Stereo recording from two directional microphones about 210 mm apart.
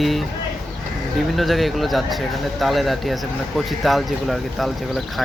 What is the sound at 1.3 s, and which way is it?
Speech, centre (ahead or behind).